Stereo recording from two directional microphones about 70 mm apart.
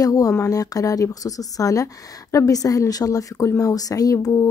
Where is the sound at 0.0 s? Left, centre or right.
Left.